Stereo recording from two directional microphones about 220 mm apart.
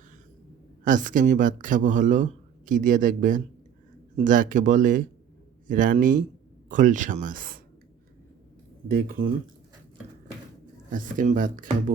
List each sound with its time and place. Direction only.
0.9 s speech: 35° right (ahead or behind)
8.9 s speech: 40° right (ahead or behind)
10.8 s speech: 35° right (ahead or behind)